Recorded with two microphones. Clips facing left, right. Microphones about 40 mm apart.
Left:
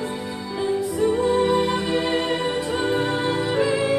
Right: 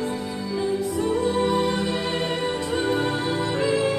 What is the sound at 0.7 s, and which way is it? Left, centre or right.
Music, centre.